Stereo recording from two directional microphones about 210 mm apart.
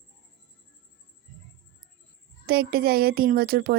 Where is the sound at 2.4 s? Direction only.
50° right (ahead or behind).